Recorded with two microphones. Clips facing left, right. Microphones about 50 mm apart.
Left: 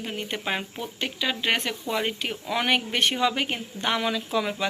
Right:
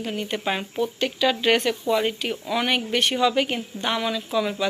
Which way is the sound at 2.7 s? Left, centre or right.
Left.